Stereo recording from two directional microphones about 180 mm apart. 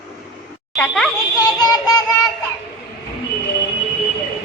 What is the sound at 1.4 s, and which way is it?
Synthetic singing, 20° left (ahead or behind).